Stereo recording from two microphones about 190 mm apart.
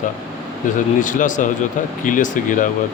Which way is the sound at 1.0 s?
45° left (ahead or behind).